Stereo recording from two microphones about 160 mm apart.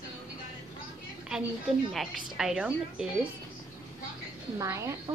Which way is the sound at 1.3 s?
5° right (ahead or behind).